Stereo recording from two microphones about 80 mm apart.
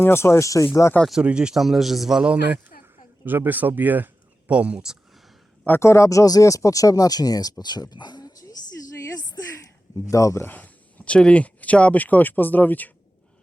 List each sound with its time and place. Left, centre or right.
0.0 s speech: left
1.2 s a man's voice: centre
3.2 s speech: right
5.6 s speech: left
9.0 s a sound: left
10.1 s speech: left
10.4 s speech: left